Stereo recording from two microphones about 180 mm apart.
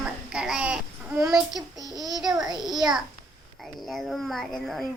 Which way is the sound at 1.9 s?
20° right (ahead or behind).